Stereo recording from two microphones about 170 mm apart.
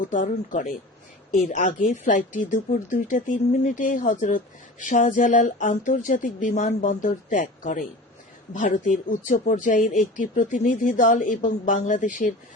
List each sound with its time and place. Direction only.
0.1 s speech: 50° left (ahead or behind)